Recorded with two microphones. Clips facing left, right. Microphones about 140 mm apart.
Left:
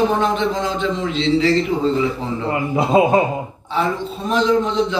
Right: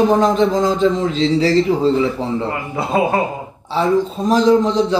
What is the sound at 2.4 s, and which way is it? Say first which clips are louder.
Speech: left 3 dB; 20° left (ahead or behind).